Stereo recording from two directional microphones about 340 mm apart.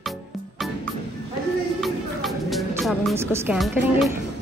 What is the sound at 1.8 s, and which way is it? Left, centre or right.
Music, centre.